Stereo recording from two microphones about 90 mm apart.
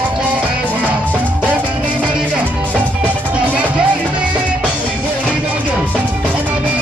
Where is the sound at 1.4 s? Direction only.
15° right (ahead or behind).